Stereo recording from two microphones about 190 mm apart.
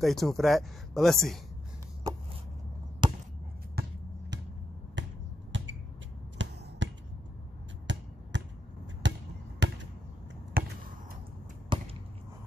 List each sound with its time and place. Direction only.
0.0 s speech: centre (ahead or behind)
3.0 s chop: 25° right (ahead or behind)
3.8 s basketball bounce: 55° right (ahead or behind)
5.0 s finger snapping: 75° right (ahead or behind)
6.4 s a sound: 75° right (ahead or behind)
6.8 s finger snapping: 75° right (ahead or behind)
9.0 s basketball bounce: 70° right (ahead or behind)
10.6 s basketball bounce: 50° right (ahead or behind)
11.7 s a sound: 25° right (ahead or behind)